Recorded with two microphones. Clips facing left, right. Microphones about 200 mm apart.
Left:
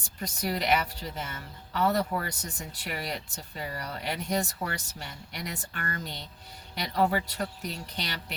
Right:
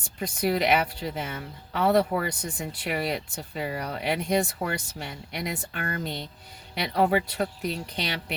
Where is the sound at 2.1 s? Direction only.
25° right (ahead or behind).